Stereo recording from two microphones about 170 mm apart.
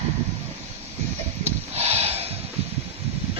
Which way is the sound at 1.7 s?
35° right (ahead or behind).